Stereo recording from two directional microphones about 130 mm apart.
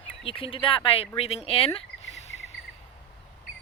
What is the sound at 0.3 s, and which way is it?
Speech, 45° left (ahead or behind).